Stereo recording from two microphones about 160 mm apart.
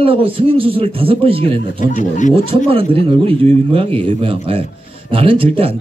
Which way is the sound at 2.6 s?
35° right (ahead or behind).